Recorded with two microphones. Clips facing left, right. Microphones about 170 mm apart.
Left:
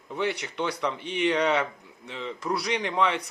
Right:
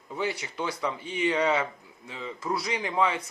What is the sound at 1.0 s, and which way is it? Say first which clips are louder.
Speech: left 2 dB; 70° left (ahead or behind).